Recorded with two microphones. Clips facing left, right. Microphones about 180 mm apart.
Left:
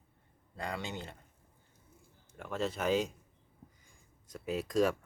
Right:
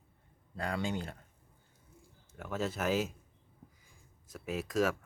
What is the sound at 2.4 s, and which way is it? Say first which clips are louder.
Speech: even; 5° right (ahead or behind).